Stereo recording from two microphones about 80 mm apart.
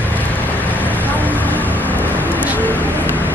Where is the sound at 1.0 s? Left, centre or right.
Left.